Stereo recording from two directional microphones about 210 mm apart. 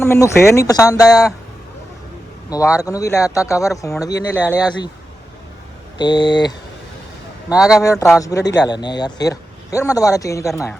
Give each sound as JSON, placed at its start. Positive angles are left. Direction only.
{"t": 0.0, "sound": "a man's voice", "side_deg": 10}
{"t": 2.5, "sound": "a man's voice", "side_deg": 15}
{"t": 6.0, "sound": "speech", "side_deg": 20}
{"t": 7.5, "sound": "a man's voice", "side_deg": -5}
{"t": 7.8, "sound": "a man's voice", "side_deg": 15}